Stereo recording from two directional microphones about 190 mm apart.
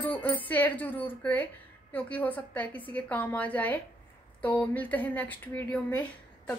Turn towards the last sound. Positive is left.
turn(degrees=5)  # may be behind; listen again after turning